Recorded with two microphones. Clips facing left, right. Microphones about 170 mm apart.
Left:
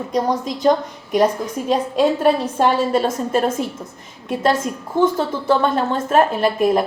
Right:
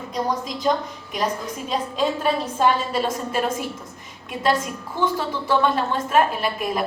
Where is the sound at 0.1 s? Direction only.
45° left (ahead or behind).